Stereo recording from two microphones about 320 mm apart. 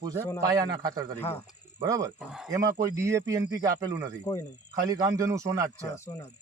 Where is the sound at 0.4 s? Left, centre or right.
Centre.